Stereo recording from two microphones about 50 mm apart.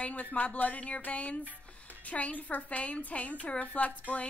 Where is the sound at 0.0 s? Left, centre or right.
Left.